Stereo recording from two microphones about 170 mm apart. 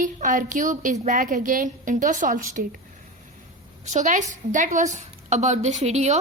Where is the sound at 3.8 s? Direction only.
45° right (ahead or behind).